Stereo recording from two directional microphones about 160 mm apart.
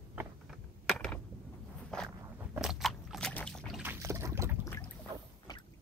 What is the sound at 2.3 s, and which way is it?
Biting, 10° right (ahead or behind).